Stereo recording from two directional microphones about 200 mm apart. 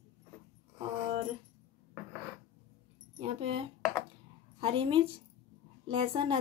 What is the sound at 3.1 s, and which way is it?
Speech, 30° right (ahead or behind).